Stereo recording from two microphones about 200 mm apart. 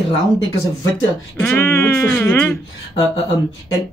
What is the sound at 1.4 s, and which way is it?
Speech, 10° left (ahead or behind).